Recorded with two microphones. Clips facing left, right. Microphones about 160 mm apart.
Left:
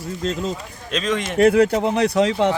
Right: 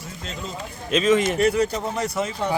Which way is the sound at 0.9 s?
5° right (ahead or behind).